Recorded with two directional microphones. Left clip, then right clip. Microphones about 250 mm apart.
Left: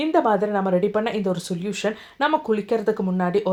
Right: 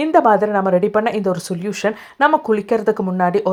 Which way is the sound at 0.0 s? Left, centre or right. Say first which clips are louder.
Right 6 dB; right.